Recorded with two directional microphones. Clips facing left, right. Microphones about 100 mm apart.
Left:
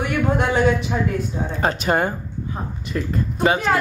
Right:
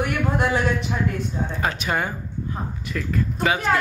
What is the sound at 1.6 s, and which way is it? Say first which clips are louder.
Speech: left 6 dB; 35° left (ahead or behind).